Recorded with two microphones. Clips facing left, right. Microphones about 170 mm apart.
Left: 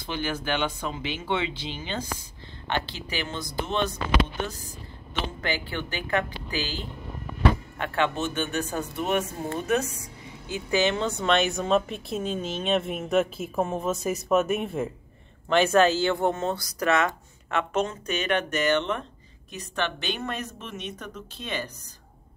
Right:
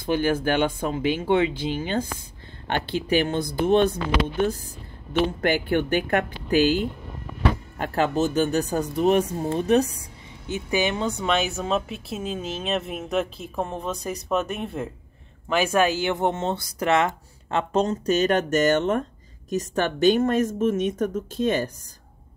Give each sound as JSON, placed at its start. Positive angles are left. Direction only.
{"t": 0.0, "sound": "speech", "side_deg": -50}
{"t": 7.8, "sound": "speech", "side_deg": -40}
{"t": 10.5, "sound": "speech", "side_deg": -15}
{"t": 15.5, "sound": "speech", "side_deg": -10}